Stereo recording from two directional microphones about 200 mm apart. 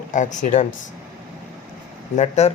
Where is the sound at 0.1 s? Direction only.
40° left (ahead or behind).